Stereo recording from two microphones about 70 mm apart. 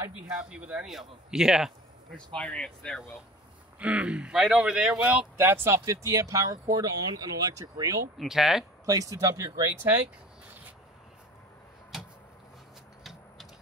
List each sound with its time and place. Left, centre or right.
0.5 s speech: centre
2.1 s speech: centre
3.8 s speech: centre
5.4 s speech: right
8.2 s speech: centre
8.8 s speech: right